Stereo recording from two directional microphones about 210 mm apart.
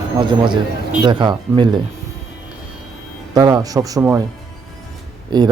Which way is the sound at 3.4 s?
15° right (ahead or behind).